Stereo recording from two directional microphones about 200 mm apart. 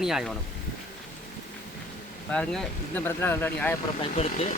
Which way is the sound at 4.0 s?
30° left (ahead or behind).